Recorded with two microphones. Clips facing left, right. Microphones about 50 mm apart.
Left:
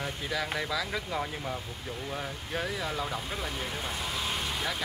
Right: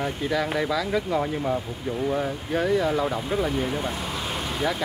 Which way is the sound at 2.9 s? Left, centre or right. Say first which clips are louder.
Right 9 dB; centre.